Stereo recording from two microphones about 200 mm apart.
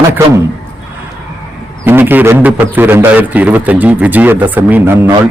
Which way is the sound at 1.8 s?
10° right (ahead or behind).